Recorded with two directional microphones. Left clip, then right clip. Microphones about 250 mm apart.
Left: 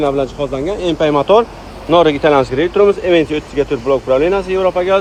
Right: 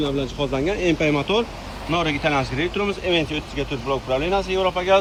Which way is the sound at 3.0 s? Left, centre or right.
Centre.